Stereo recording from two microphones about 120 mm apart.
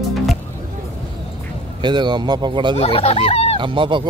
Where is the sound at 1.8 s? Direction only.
40° right (ahead or behind).